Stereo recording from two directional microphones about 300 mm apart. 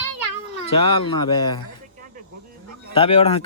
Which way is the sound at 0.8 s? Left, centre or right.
Centre.